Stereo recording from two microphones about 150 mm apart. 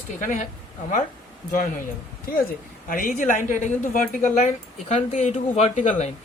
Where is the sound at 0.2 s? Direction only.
55° left (ahead or behind).